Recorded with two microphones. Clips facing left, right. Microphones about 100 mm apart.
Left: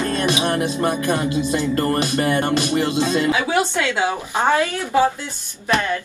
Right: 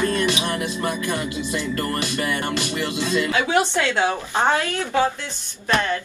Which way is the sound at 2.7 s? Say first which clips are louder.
Left 4 dB; 20° left (ahead or behind).